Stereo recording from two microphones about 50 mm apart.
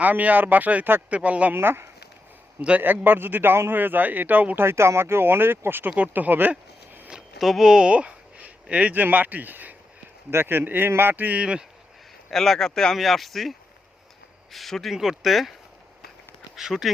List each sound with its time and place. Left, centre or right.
0.0 s a man's voice: right
1.5 s speech: right
2.6 s a man's voice: right
2.8 s a man's voice: right
4.6 s speech: right
6.0 s a man's voice: right
7.1 s a sound: centre; by 8.5 s right
8.7 s a man's voice: right
11.3 s a man's voice: right
12.3 s speech: centre
14.5 s speech: centre
16.6 s speech: centre